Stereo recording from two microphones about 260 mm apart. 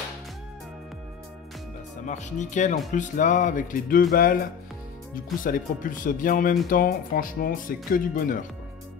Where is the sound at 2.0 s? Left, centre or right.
Left.